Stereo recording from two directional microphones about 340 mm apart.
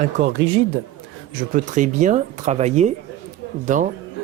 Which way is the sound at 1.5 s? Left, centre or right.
Right.